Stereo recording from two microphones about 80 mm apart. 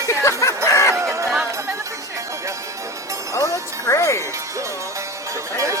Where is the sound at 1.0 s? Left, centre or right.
Right.